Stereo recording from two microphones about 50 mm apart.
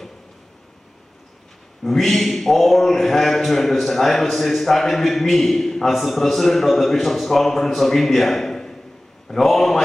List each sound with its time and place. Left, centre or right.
1.8 s a man's voice: centre